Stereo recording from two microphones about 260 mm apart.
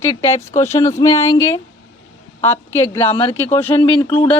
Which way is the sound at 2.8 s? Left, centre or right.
Centre.